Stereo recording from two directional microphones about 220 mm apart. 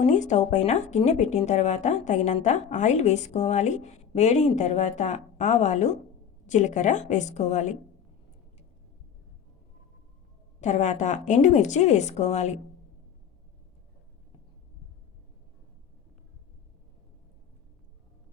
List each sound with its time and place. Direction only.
0.0 s speech: 35° left (ahead or behind)
10.6 s speech: 30° left (ahead or behind)